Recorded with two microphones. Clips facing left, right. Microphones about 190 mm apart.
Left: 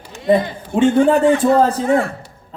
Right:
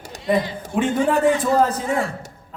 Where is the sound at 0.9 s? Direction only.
55° left (ahead or behind).